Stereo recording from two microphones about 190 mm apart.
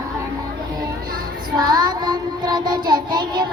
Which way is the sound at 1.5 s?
20° right (ahead or behind).